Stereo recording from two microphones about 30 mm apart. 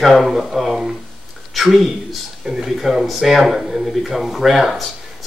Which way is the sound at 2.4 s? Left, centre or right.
Centre.